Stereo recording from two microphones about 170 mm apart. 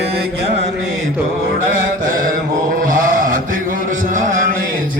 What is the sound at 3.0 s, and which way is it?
Mantra, 50° right (ahead or behind).